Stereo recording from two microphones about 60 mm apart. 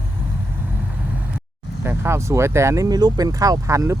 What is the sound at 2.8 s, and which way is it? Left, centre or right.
Speech, right.